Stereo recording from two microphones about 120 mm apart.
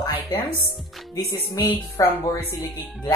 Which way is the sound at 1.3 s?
30° left (ahead or behind).